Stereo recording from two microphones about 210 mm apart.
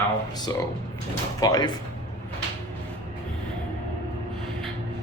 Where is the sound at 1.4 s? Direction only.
20° left (ahead or behind).